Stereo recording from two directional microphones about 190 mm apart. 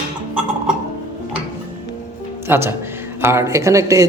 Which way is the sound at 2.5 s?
10° right (ahead or behind).